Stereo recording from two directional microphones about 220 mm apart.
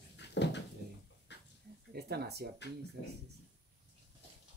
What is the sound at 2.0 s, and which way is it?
Speech, 45° right (ahead or behind).